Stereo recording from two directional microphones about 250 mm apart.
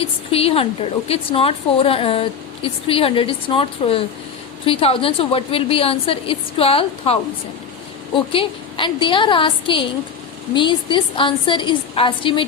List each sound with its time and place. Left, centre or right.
0.0 s a woman's voice: left